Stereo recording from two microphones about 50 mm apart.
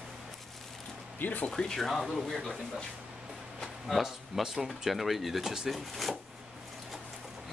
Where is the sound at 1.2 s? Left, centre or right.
Left.